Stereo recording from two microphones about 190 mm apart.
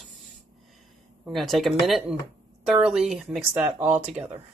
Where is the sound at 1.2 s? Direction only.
Centre (ahead or behind).